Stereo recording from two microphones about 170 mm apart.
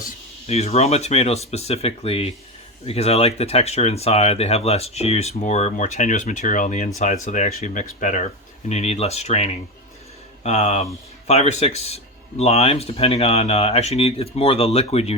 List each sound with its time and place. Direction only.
0.4 s speech: 40° left (ahead or behind)